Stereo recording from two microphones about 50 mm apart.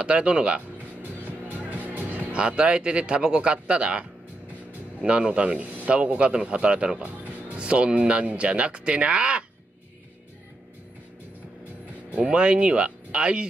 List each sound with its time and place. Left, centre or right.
0.0 s speech: right
1.5 s music: right
2.3 s speech: right
5.0 s speech: right
12.2 s speech: right